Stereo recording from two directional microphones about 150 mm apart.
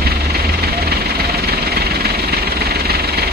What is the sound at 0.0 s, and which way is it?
Vehicle, 90° right.